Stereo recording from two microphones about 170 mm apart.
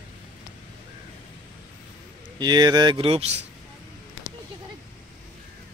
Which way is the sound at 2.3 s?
25° right (ahead or behind).